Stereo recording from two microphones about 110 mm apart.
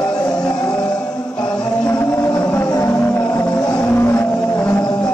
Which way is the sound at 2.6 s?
35° left (ahead or behind).